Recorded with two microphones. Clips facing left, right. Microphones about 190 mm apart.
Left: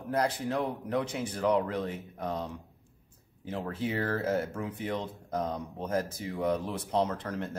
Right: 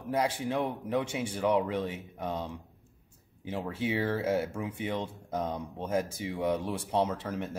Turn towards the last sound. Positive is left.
turn(degrees=-10)  # may be behind; listen again after turning